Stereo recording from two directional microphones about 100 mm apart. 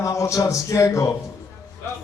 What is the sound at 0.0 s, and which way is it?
Speech, 30° left (ahead or behind).